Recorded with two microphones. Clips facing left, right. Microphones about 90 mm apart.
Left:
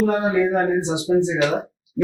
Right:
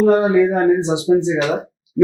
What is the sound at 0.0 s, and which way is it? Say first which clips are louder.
Speech: right 6 dB; 25° right (ahead or behind).